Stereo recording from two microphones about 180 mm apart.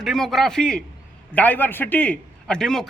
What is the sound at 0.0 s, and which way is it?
A man's voice, centre (ahead or behind).